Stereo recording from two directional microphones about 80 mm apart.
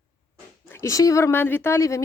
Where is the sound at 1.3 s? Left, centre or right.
Left.